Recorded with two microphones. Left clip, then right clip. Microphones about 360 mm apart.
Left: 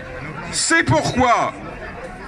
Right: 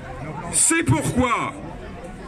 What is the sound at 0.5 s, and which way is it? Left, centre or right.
Speech, centre.